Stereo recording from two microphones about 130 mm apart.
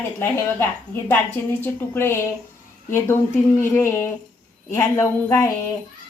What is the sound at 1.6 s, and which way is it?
A woman's voice, 15° left (ahead or behind).